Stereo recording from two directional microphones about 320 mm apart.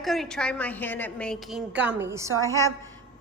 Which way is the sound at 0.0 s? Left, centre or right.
Centre.